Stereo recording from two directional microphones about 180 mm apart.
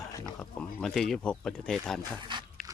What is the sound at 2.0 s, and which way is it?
Speech, 25° right (ahead or behind).